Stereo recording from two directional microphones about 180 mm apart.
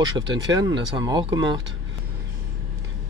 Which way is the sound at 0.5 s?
20° right (ahead or behind).